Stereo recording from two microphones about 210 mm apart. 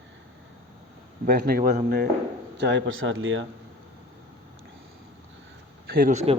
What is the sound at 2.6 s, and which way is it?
Speech, 55° right (ahead or behind).